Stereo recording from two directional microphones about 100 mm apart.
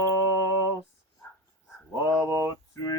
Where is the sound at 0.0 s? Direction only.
35° left (ahead or behind).